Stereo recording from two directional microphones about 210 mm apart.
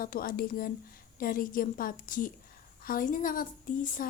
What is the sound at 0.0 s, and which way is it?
Speech, 45° left (ahead or behind).